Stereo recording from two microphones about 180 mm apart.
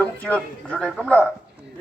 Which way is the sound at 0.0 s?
10° left (ahead or behind).